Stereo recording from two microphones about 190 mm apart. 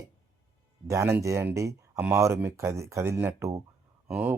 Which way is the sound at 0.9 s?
15° right (ahead or behind).